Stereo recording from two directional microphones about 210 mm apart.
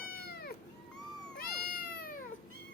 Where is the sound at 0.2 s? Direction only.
45° left (ahead or behind).